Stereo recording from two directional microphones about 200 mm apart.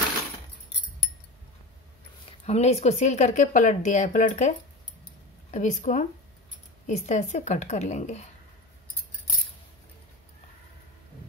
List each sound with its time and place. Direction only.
2.4 s speech: 35° left (ahead or behind)